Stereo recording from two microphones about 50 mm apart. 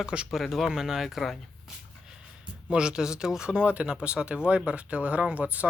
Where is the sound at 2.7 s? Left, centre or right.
Centre.